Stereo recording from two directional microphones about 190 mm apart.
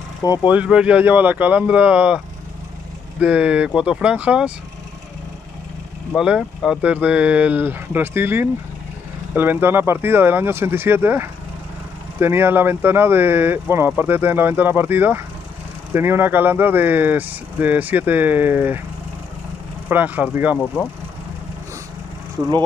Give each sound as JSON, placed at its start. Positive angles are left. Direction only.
{"t": 0.2, "sound": "speech", "side_deg": 20}
{"t": 0.5, "sound": "speech", "side_deg": -5}
{"t": 6.1, "sound": "speech", "side_deg": -5}
{"t": 19.9, "sound": "speech", "side_deg": -10}